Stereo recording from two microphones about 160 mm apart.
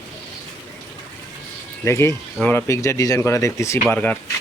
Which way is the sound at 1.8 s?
15° left (ahead or behind).